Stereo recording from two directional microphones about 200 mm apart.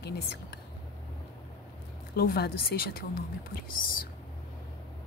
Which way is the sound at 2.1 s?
50° left (ahead or behind).